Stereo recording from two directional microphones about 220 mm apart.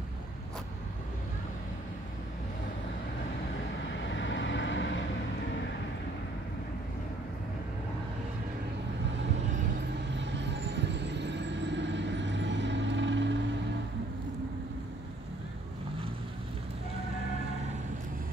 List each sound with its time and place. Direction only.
4.1 s vehicle: 55° left (ahead or behind)
10.1 s vehicle: 55° right (ahead or behind)